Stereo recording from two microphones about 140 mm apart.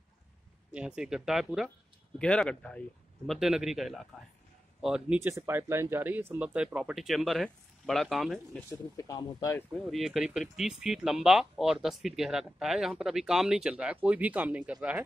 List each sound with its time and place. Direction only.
0.7 s speech: 5° right (ahead or behind)
3.3 s speech: 5° right (ahead or behind)
5.2 s speech: 20° right (ahead or behind); by 8.4 s centre (ahead or behind)
8.9 s speech: 25° left (ahead or behind)
9.8 s speech: centre (ahead or behind)